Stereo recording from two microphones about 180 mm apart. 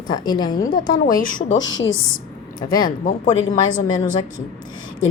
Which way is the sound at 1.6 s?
90° left.